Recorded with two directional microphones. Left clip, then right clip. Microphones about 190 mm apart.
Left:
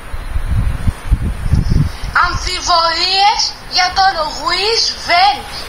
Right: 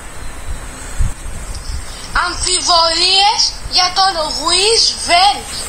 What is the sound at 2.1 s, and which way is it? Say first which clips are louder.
A woman's voice: left 2 dB; 25° right (ahead or behind).